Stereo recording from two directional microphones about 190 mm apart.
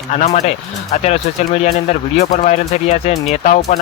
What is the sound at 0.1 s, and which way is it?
Speech, 40° left (ahead or behind).